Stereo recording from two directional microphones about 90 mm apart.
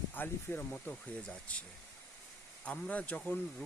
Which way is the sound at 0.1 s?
20° left (ahead or behind).